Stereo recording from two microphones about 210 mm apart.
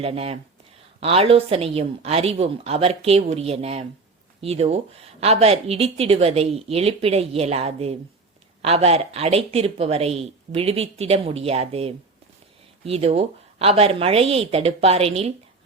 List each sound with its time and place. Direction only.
0.0 s speech: 30° right (ahead or behind)